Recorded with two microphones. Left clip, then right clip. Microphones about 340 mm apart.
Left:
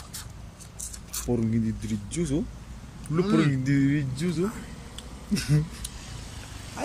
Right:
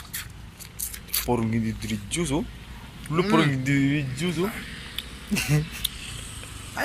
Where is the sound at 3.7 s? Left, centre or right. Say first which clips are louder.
Right 1 dB; right.